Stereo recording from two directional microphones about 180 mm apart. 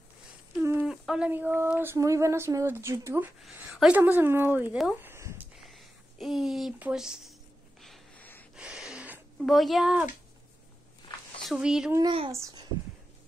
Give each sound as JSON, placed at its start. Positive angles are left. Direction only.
{"t": 0.6, "sound": "a sound", "side_deg": -10}
{"t": 3.5, "sound": "a woman's voice", "side_deg": -10}
{"t": 5.1, "sound": "a sound", "side_deg": -15}
{"t": 5.6, "sound": "speech", "side_deg": 0}
{"t": 7.8, "sound": "snort", "side_deg": 5}
{"t": 8.5, "sound": "a sound", "side_deg": -5}
{"t": 9.4, "sound": "speech", "side_deg": 0}
{"t": 11.5, "sound": "speech", "side_deg": -5}
{"t": 12.3, "sound": "a woman's voice", "side_deg": -15}